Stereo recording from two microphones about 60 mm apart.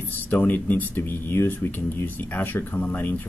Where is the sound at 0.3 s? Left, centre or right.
Left.